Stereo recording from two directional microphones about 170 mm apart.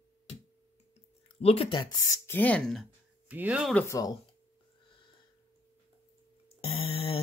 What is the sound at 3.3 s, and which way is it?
Speech, 10° right (ahead or behind).